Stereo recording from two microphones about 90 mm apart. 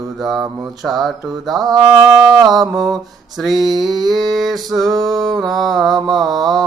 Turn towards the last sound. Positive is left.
turn(degrees=0)  # may be behind; listen again after turning